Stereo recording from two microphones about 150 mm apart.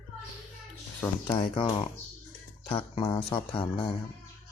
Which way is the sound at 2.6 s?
35° left (ahead or behind).